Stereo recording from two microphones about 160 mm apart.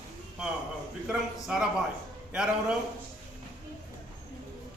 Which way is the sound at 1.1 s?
5° right (ahead or behind).